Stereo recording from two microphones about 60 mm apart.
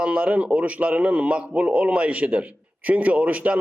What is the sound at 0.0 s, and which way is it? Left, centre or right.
A man's voice, centre.